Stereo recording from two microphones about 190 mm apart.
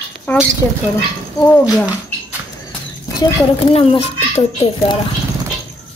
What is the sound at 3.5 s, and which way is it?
Speech, 30° left (ahead or behind).